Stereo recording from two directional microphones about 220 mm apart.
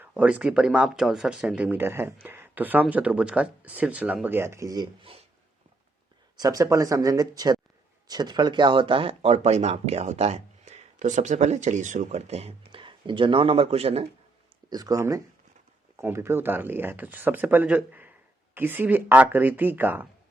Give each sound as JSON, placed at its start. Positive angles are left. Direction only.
{"t": 0.0, "sound": "speech", "side_deg": -5}
{"t": 6.3, "sound": "speech", "side_deg": -15}
{"t": 14.7, "sound": "speech", "side_deg": -15}